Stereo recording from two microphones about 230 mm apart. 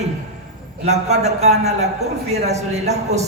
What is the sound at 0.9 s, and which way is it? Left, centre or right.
A woman's voice, right.